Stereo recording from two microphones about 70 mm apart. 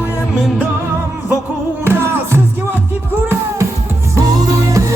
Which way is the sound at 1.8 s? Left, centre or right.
Right.